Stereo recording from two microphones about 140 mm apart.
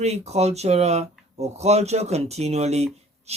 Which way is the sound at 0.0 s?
50° right (ahead or behind).